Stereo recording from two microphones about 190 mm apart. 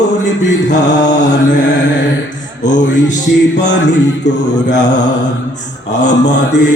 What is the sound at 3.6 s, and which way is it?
Mantra, 65° left (ahead or behind).